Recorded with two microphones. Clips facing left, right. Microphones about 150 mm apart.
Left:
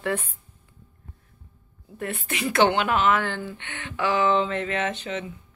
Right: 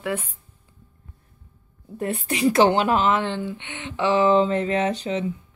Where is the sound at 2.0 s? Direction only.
35° right (ahead or behind).